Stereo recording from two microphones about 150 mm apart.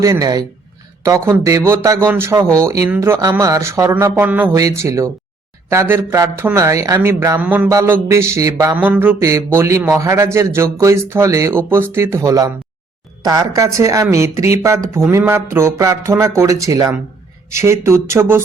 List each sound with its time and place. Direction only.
0.0 s a man's voice: 25° right (ahead or behind)